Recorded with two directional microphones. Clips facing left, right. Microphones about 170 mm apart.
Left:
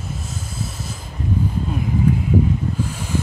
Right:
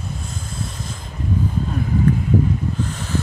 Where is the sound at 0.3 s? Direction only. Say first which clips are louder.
Even; 5° left (ahead or behind).